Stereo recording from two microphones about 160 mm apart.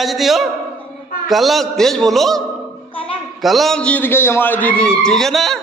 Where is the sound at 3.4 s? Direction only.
Centre (ahead or behind).